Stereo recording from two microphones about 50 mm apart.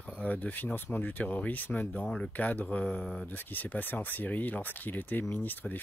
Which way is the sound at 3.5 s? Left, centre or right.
Left.